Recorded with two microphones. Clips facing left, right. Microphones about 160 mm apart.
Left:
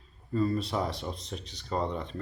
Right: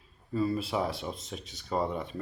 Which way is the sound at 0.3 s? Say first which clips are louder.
Left 1 dB; 5° right (ahead or behind).